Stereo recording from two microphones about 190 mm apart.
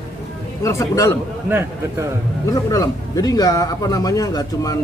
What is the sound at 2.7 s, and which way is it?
Speech, 20° left (ahead or behind).